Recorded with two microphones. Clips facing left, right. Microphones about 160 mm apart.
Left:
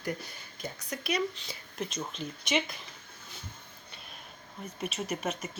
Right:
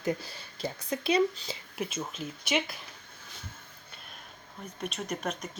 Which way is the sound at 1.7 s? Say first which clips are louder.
Right 1 dB; 5° right (ahead or behind).